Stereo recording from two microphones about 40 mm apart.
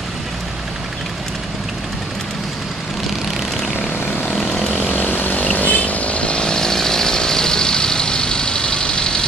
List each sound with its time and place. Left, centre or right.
4.3 s vehicle: centre
4.8 s chainsaw: left